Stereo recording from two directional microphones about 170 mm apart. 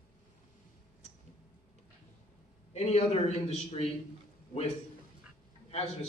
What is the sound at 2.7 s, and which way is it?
A man's voice, 40° left (ahead or behind).